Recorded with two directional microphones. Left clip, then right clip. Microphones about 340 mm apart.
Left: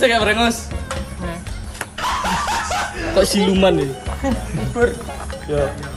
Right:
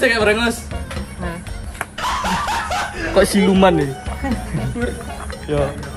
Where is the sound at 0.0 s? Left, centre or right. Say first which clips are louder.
Even; centre.